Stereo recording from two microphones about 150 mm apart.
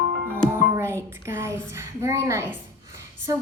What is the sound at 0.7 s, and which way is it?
A woman's voice, 20° right (ahead or behind).